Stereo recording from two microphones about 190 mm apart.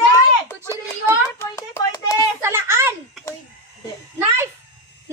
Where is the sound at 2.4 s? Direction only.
15° right (ahead or behind).